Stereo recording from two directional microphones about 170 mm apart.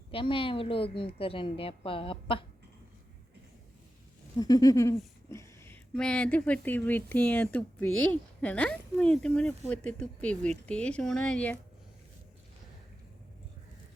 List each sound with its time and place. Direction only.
0.1 s a woman's voice: 30° left (ahead or behind)
4.4 s a sound: 20° left (ahead or behind)
5.3 s speech: 15° left (ahead or behind)